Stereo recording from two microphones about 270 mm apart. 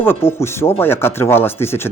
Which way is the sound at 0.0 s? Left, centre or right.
Centre.